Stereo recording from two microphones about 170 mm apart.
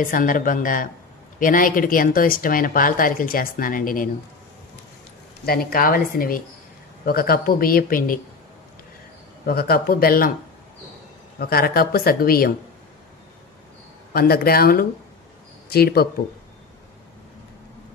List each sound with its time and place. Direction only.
0.0 s speech: 55° left (ahead or behind)
5.4 s speech: 60° left (ahead or behind)
9.5 s speech: 65° left (ahead or behind)
11.3 s speech: 65° left (ahead or behind)
14.1 s speech: 65° left (ahead or behind)